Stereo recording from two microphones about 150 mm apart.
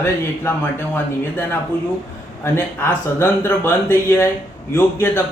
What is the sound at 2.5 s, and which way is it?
Speech, 15° left (ahead or behind).